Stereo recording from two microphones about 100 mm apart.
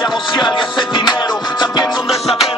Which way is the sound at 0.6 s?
50° left (ahead or behind).